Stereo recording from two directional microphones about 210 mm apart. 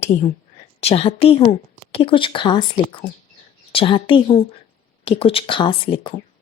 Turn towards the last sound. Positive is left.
turn(degrees=25)  # may be behind; listen again after turning